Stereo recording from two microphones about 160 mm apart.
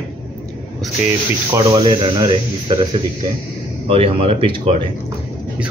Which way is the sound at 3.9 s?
35° right (ahead or behind).